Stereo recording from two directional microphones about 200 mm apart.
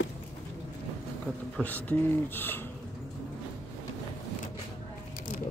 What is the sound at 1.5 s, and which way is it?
Speech, 10° left (ahead or behind).